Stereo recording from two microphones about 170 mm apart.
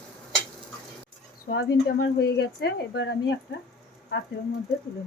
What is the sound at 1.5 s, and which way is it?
Speech, 80° left.